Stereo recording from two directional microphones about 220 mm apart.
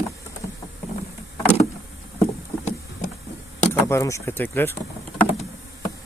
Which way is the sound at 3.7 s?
15° left (ahead or behind).